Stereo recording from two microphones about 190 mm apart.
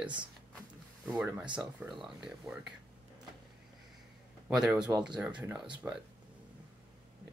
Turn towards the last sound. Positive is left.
turn(degrees=-10)  # may be behind; listen again after turning